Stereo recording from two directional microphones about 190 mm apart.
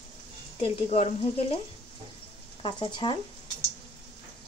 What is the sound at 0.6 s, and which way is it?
Speech, 35° left (ahead or behind).